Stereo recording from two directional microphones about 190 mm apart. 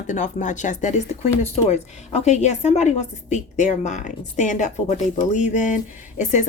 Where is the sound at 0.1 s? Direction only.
40° left (ahead or behind).